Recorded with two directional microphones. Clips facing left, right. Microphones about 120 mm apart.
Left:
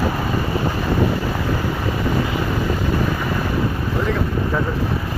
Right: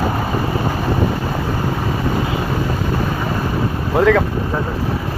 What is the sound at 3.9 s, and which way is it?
Boat, 90° right.